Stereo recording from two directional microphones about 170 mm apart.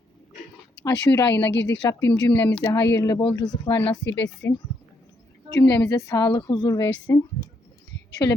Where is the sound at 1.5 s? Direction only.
90° left.